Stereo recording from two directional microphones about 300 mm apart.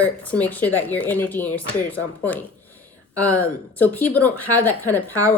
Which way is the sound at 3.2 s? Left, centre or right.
Centre.